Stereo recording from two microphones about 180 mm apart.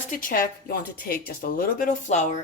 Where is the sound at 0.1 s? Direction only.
50° left (ahead or behind).